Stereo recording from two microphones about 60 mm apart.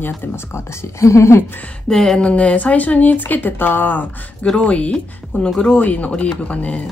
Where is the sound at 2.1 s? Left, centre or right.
Centre.